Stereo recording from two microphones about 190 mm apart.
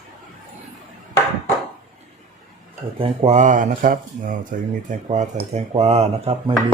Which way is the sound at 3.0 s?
35° right (ahead or behind).